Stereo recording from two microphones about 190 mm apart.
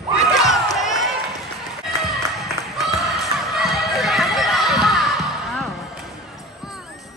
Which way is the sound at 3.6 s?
Centre (ahead or behind).